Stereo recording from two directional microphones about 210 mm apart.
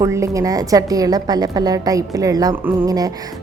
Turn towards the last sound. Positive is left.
turn(degrees=-15)  # may be behind; listen again after turning